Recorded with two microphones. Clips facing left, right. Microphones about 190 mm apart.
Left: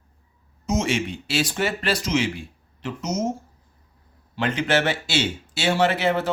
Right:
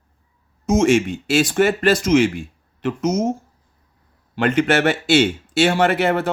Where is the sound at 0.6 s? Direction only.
50° right (ahead or behind).